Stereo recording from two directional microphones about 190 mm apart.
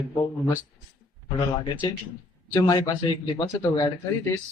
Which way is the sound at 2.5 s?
20° left (ahead or behind).